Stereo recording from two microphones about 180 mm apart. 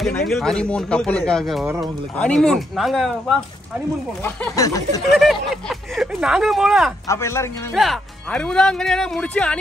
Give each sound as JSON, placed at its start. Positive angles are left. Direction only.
{"t": 0.3, "sound": "speech", "side_deg": 5}
{"t": 4.6, "sound": "snicker", "side_deg": 20}
{"t": 5.1, "sound": "speech", "side_deg": 0}
{"t": 7.1, "sound": "a man's voice", "side_deg": 15}
{"t": 7.7, "sound": "speech", "side_deg": 0}